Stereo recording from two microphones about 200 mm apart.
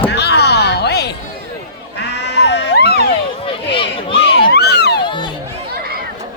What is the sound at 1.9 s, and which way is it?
Sheep, 60° left (ahead or behind).